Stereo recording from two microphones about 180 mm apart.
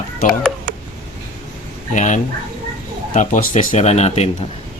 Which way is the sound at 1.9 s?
45° left (ahead or behind).